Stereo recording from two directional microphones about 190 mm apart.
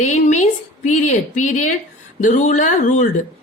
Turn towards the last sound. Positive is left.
turn(degrees=40)  # may be behind; listen again after turning